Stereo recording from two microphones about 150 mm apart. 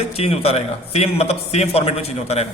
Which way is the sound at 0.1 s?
40° left (ahead or behind).